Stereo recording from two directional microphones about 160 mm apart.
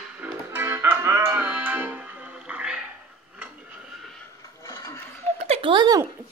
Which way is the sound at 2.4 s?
5° right (ahead or behind).